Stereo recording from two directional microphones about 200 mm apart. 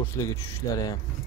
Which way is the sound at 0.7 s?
15° left (ahead or behind).